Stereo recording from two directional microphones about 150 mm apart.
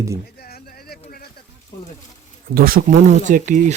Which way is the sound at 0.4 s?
90° left.